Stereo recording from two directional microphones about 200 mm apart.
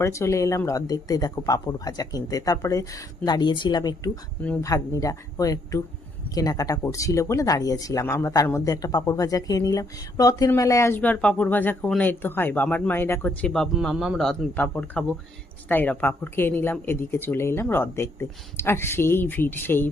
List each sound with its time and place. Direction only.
0.0 s speech: 15° left (ahead or behind)